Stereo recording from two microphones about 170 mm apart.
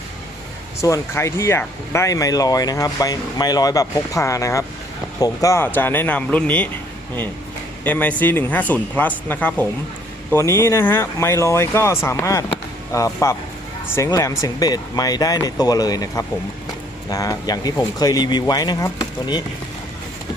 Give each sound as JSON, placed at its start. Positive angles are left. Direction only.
{"t": 0.8, "sound": "speech", "side_deg": 15}
{"t": 7.9, "sound": "speech", "side_deg": 10}